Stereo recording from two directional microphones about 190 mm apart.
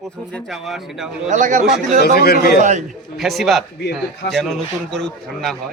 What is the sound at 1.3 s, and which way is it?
Speech, 40° right (ahead or behind).